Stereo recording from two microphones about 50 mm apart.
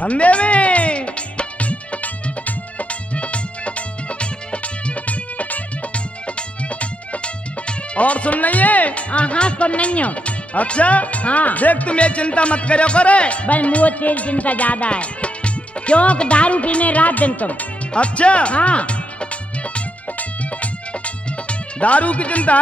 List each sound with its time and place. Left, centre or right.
0.0 s music: left
7.6 s speech: left
19.7 s music: left